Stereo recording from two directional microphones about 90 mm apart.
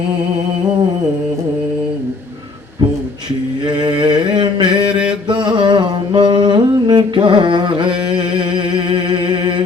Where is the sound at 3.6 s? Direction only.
55° right (ahead or behind).